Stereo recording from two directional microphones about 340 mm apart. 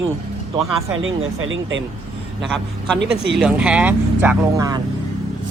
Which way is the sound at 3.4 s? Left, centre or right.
Centre.